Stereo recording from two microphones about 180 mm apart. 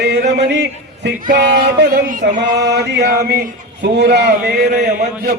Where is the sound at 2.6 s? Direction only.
70° right (ahead or behind).